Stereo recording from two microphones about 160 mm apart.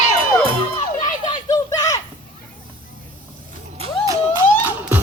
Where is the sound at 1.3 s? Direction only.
25° left (ahead or behind).